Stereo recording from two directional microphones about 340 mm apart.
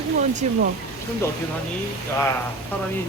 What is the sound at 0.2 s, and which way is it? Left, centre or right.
Speech, right.